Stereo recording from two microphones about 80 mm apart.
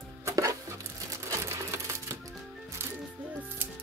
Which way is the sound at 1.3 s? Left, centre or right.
Right.